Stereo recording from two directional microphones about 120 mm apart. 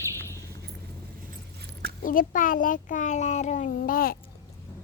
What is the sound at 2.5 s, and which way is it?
A child's voice, 90° left.